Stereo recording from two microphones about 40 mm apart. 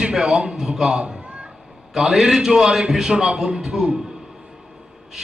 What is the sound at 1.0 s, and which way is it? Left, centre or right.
Cat, right.